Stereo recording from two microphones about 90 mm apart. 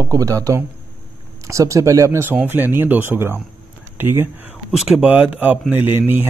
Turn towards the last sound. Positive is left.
turn(degrees=-20)  # may be behind; listen again after turning